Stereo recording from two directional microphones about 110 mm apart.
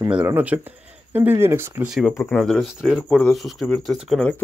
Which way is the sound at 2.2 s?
5° left (ahead or behind).